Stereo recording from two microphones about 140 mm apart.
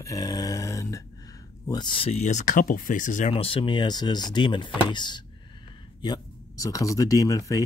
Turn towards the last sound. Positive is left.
turn(degrees=25)  # may be behind; listen again after turning